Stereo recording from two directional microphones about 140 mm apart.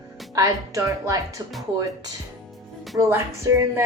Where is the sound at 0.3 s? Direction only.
25° right (ahead or behind).